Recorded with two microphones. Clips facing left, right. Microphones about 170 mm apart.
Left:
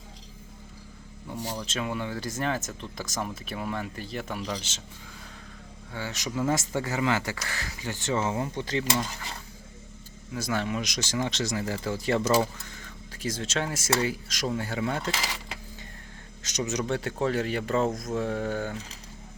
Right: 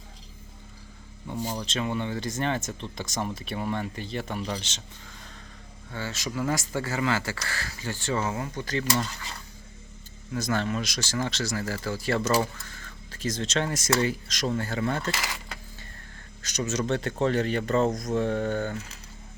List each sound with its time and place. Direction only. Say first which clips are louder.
1.6 s speech: right 2 dB; 5° left (ahead or behind)
5.9 s speech: even; 15° left (ahead or behind)
10.3 s speech: right 2 dB; 10° left (ahead or behind)
16.4 s speech: right 1 dB; 20° left (ahead or behind)